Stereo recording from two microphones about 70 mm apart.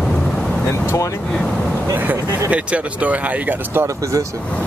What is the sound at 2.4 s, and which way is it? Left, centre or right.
Speech, centre.